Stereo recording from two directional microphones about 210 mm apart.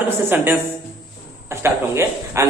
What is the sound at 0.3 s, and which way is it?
A man's voice, 10° right (ahead or behind).